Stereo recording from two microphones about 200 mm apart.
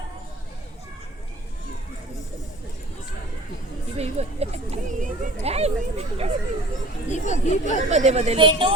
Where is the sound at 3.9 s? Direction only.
30° right (ahead or behind).